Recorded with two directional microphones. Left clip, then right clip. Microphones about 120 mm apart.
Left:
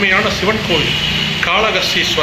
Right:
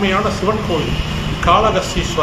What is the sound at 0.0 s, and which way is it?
Speech, 5° left (ahead or behind).